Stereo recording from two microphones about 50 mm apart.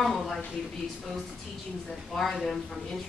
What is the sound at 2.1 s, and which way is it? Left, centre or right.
Speech, centre.